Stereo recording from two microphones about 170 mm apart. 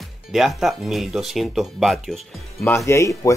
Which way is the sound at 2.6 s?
15° left (ahead or behind).